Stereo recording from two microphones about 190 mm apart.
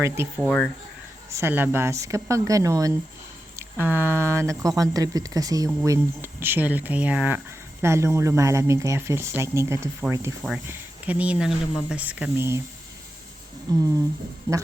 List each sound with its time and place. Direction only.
0.0 s speech: 15° right (ahead or behind)
0.4 s speech: 5° left (ahead or behind)
1.3 s speech: 15° right (ahead or behind)
13.7 s speech: 20° right (ahead or behind)